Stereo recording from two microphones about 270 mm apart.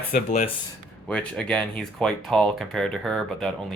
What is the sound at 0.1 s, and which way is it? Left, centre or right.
Speech, left.